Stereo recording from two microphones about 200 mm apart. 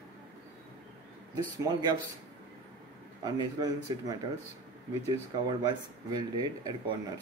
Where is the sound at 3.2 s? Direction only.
20° right (ahead or behind).